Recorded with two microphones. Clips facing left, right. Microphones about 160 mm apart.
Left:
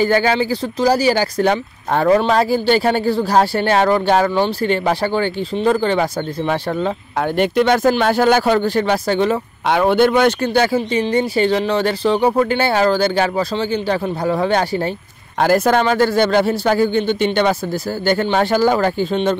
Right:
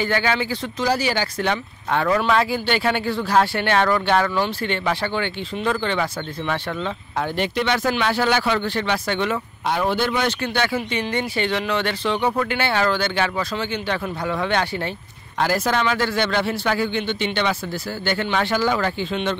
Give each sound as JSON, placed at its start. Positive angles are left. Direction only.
{"t": 0.0, "sound": "speech", "side_deg": 40}
{"t": 7.2, "sound": "speech", "side_deg": 50}
{"t": 9.7, "sound": "speech", "side_deg": 65}
{"t": 15.4, "sound": "speech", "side_deg": 50}